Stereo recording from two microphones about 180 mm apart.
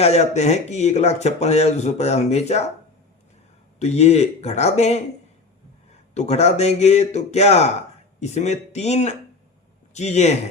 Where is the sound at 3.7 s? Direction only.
35° left (ahead or behind).